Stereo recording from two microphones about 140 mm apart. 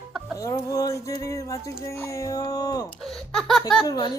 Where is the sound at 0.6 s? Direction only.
25° left (ahead or behind).